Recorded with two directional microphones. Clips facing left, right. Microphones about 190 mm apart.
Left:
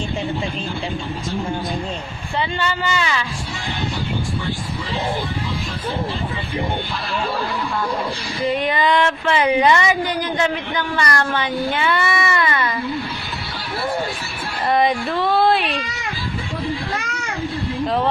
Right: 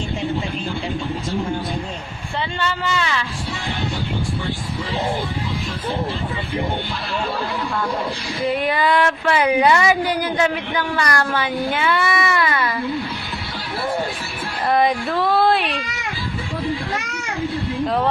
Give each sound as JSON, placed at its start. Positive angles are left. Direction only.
{"t": 2.4, "sound": "a woman's voice", "side_deg": 0}
{"t": 8.5, "sound": "a woman's voice", "side_deg": -5}
{"t": 14.7, "sound": "a woman's voice", "side_deg": 0}
{"t": 17.8, "sound": "a woman's voice", "side_deg": 0}